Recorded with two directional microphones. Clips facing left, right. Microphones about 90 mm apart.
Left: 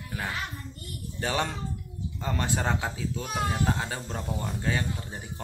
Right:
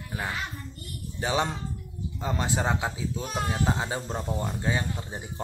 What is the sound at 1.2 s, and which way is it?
A man's voice, 20° right (ahead or behind).